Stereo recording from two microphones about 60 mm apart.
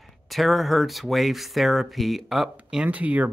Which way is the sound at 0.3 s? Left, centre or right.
Centre.